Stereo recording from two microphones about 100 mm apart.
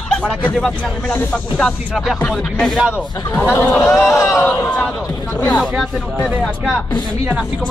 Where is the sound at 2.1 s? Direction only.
10° left (ahead or behind); by 4.5 s 30° left (ahead or behind).